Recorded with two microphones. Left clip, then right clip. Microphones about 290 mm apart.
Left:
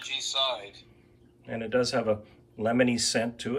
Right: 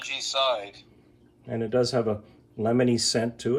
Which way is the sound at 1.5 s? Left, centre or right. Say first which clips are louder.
Right 2 dB; centre.